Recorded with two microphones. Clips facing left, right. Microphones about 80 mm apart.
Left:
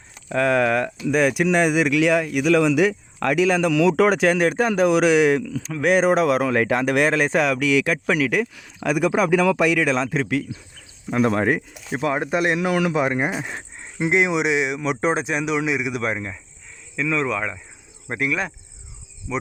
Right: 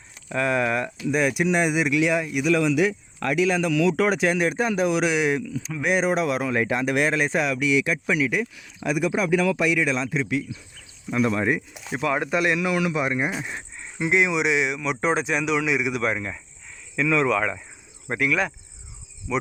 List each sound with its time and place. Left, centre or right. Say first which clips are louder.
0.3 s speech: left 4 dB; left
2.6 s speech: left 3 dB; left
5.4 s speech: left 2 dB; left
5.8 s speech: left 5 dB; left
11.9 s a man's voice: left 2 dB; left
13.4 s speech: left 2 dB; left
13.7 s speech: left 2 dB; left